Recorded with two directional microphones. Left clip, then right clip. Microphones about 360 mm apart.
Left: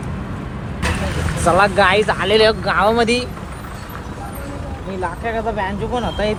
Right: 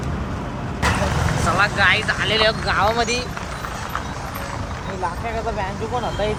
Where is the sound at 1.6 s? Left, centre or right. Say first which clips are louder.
Left 3 dB; centre.